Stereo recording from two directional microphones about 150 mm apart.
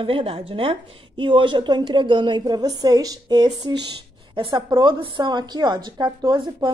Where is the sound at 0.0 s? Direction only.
40° right (ahead or behind).